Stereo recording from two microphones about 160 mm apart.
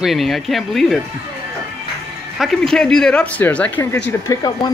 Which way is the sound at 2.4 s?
Centre (ahead or behind).